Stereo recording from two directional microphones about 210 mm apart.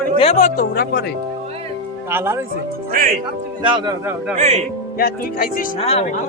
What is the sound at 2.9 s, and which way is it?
Speech, 40° right (ahead or behind).